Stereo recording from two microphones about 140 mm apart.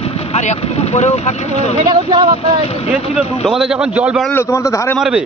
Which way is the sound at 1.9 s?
30° right (ahead or behind).